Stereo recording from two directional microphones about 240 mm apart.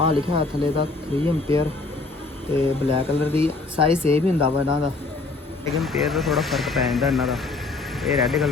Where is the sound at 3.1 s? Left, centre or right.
Centre.